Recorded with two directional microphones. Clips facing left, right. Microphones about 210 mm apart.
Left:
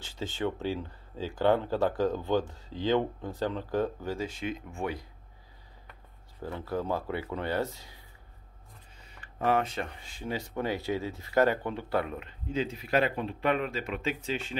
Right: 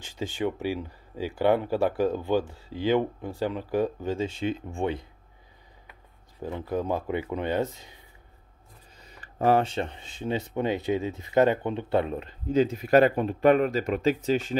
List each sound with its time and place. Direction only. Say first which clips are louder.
0.0 s speech: right 3 dB; 15° right (ahead or behind)
6.4 s speech: right 4 dB; 15° right (ahead or behind)
9.0 s speech: right 5 dB; 40° right (ahead or behind)